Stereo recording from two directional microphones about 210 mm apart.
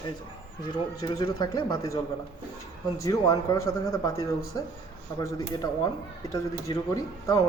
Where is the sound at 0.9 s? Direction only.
20° left (ahead or behind).